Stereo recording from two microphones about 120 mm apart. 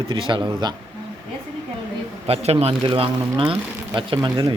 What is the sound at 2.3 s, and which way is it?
A man's voice, 55° right (ahead or behind).